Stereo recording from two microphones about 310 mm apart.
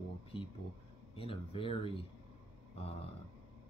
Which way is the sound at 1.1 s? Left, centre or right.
Centre.